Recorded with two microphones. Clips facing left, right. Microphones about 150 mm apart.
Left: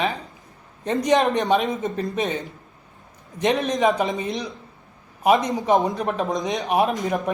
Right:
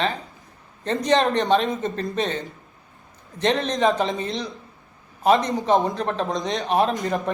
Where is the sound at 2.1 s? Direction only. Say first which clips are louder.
Even; 10° left (ahead or behind).